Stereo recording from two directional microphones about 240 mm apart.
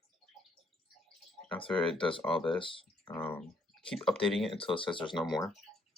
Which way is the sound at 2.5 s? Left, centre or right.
Left.